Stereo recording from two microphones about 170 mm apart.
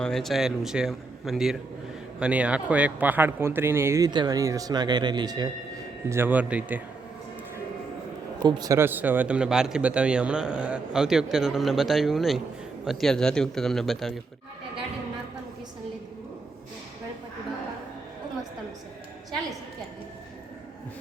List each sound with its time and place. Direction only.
0.0 s speech: centre (ahead or behind); by 5.5 s 25° right (ahead or behind)
6.1 s speech: 10° right (ahead or behind)
8.4 s speech: 25° right (ahead or behind); by 14.1 s centre (ahead or behind)